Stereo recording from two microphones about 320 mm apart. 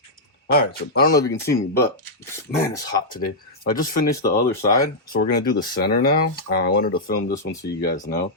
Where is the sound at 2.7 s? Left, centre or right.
Centre.